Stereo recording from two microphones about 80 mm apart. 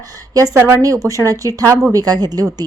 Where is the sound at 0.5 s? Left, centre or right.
Right.